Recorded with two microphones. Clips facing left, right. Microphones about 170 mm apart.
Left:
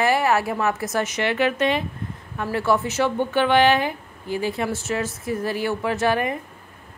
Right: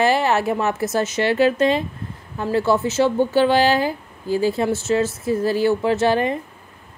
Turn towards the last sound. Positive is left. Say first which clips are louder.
# right 4 dB
turn(degrees=-30)  # may be behind; listen again after turning